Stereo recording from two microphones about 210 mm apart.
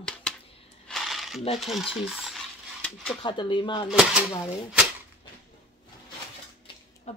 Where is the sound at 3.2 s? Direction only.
20° left (ahead or behind).